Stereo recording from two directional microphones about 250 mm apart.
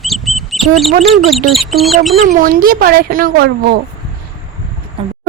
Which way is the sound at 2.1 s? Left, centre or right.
Right.